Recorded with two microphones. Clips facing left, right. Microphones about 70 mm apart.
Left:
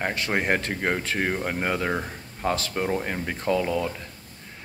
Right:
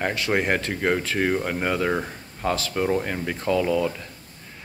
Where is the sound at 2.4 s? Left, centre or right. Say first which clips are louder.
Right 2 dB; left.